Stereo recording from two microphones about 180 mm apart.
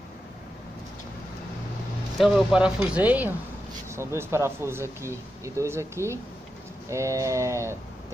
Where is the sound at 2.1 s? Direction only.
Centre (ahead or behind).